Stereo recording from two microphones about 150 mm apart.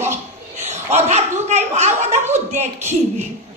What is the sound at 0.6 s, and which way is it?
Chuckle, 50° right (ahead or behind).